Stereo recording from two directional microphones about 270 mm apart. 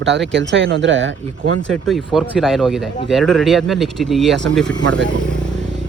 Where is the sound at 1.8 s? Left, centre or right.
Centre.